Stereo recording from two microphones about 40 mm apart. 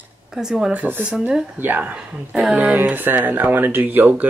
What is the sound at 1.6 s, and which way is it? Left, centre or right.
Speech, right.